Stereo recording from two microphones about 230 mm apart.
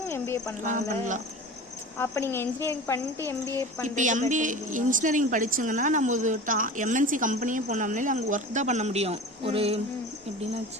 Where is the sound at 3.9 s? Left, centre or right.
Right.